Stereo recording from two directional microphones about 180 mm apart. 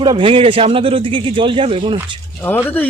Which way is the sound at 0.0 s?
25° right (ahead or behind).